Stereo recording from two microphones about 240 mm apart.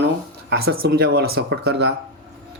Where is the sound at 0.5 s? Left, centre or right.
Right.